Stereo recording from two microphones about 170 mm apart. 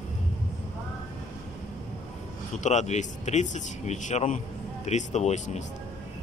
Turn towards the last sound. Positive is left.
turn(degrees=45)  # may be behind; listen again after turning